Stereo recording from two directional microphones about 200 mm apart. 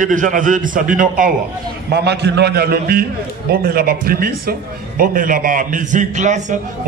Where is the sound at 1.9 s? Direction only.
55° right (ahead or behind).